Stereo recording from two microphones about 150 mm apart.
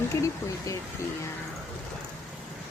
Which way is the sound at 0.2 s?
20° left (ahead or behind).